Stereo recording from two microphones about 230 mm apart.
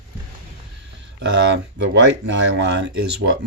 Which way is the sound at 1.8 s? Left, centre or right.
Right.